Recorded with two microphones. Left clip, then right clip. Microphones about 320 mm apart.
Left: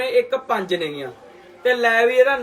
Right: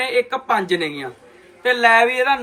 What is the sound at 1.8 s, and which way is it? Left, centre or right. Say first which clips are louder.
Speech: right 2 dB; right.